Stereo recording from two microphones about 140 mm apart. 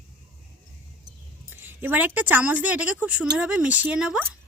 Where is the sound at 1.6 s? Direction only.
15° right (ahead or behind).